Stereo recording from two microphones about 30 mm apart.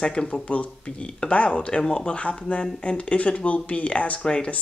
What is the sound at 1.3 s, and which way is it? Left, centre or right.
Speech, left.